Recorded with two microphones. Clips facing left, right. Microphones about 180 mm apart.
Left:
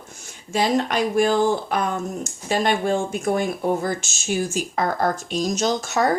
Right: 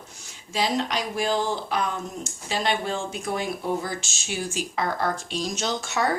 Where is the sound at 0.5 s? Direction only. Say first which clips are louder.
Left 5 dB; 50° left (ahead or behind).